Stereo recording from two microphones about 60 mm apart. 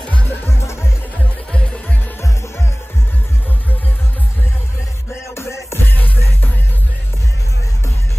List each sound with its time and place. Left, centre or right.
0.0 s music: centre
0.5 s music: left
5.3 s music: left